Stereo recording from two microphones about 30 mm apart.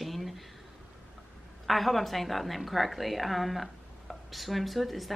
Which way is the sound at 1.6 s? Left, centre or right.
Centre.